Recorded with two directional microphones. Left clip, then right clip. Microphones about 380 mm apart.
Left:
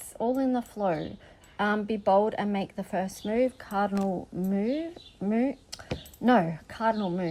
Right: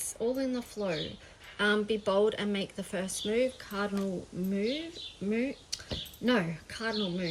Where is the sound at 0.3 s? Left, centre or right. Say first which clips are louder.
Left 5 dB; left.